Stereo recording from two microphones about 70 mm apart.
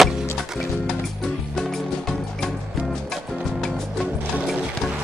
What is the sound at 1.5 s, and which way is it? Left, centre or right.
Music, centre.